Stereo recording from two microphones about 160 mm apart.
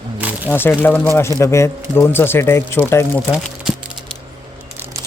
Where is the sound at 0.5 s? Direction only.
15° left (ahead or behind).